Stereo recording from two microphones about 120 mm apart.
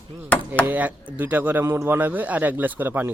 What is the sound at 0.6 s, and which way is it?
Speech, 15° right (ahead or behind).